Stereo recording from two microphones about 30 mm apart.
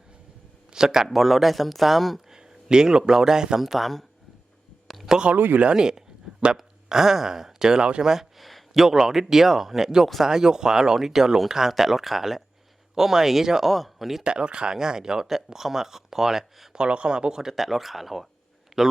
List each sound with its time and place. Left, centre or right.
0.7 s a man's voice: centre
1.0 s speech: centre
2.3 s a sound: right
3.1 s speech: centre
3.6 s a man's voice: centre
5.1 s speech: centre
6.8 s a man's voice: centre
8.4 s a sound: centre
8.7 s a man's voice: centre
10.2 s a man's voice: right
13.7 s speech: centre
14.3 s a man's voice: right; by 16.5 s centre
16.7 s speech: right
17.5 s a man's voice: centre